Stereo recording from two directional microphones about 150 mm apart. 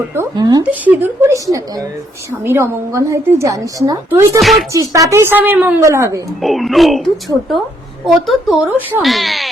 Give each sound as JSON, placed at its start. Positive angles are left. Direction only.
{"t": 0.2, "sound": "a woman's voice", "side_deg": -25}
{"t": 0.6, "sound": "speech", "side_deg": -10}
{"t": 2.4, "sound": "a woman's voice", "side_deg": -15}
{"t": 4.4, "sound": "speech", "side_deg": 0}
{"t": 4.7, "sound": "a woman's voice", "side_deg": -20}
{"t": 6.4, "sound": "speech", "side_deg": 0}